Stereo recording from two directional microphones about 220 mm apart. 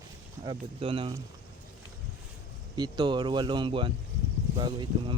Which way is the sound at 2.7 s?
20° right (ahead or behind).